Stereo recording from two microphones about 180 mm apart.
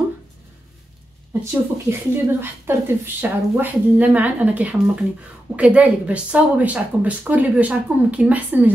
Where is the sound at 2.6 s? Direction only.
10° right (ahead or behind).